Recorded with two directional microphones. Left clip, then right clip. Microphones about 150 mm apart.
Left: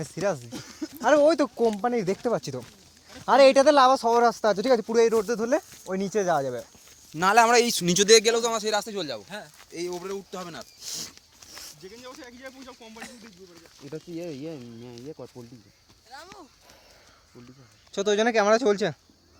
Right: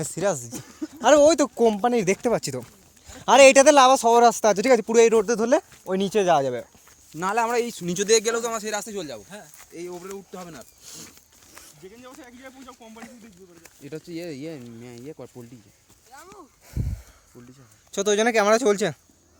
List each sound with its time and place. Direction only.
0.0 s speech: 20° right (ahead or behind)
0.9 s speech: 35° right (ahead or behind)
1.6 s speech: 40° right (ahead or behind)
5.9 s speech: 90° right
6.2 s speech: 40° right (ahead or behind)
7.2 s speech: 65° left (ahead or behind); by 8.0 s 80° left
8.0 s a man's voice: 40° left (ahead or behind); by 9.2 s 25° left (ahead or behind)
9.7 s speech: 40° left (ahead or behind)
11.8 s speech: 35° right (ahead or behind)
13.8 s speech: 45° right (ahead or behind)
14.2 s speech: 30° right (ahead or behind)
15.0 s speech: 35° right (ahead or behind)
16.1 s a sound: 5° left (ahead or behind)
17.9 s speech: 15° right (ahead or behind)